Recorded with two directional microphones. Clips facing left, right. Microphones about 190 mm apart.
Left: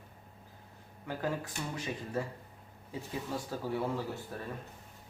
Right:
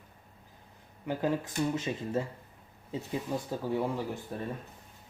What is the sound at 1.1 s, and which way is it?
Speech, 20° right (ahead or behind).